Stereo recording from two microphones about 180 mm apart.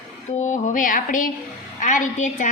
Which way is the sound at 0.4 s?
45° left (ahead or behind).